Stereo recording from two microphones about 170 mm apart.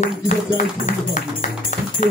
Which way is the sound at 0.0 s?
45° left (ahead or behind).